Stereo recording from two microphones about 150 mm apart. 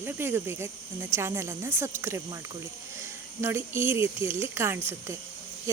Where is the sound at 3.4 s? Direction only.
15° right (ahead or behind).